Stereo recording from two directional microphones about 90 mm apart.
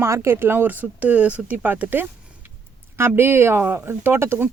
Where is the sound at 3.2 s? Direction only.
25° right (ahead or behind).